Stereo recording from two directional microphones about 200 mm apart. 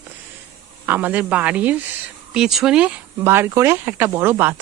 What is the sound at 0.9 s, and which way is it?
Speech, 10° right (ahead or behind).